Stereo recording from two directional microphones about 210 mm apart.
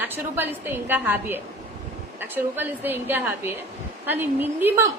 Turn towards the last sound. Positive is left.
turn(degrees=-10)  # may be behind; listen again after turning